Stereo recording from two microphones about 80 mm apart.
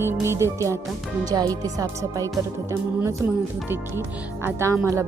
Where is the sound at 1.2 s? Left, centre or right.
Right.